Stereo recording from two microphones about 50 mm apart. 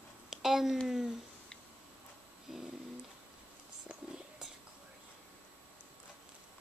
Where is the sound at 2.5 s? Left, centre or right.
Centre.